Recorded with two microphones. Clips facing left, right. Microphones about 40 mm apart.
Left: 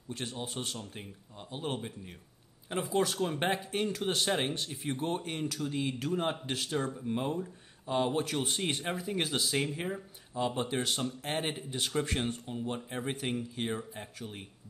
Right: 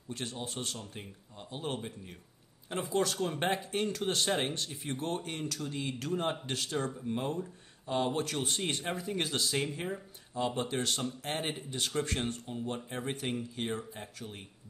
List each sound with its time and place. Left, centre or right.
0.1 s speech: centre